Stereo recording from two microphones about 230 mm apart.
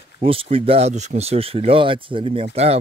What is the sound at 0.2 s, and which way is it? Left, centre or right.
Speech, right.